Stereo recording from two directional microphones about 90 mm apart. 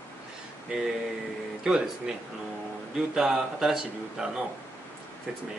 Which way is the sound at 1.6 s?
5° right (ahead or behind).